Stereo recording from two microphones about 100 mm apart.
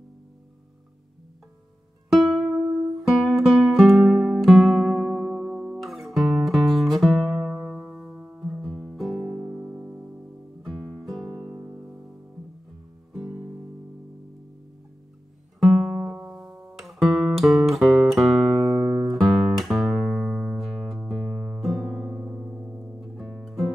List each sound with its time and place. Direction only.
2.0 s music: centre (ahead or behind)
9.2 s music: 40° right (ahead or behind)
9.8 s music: 10° right (ahead or behind)
10.6 s guitar: centre (ahead or behind)
11.6 s music: 25° right (ahead or behind)
15.6 s music: centre (ahead or behind)
16.4 s music: 25° right (ahead or behind)
16.7 s music: centre (ahead or behind)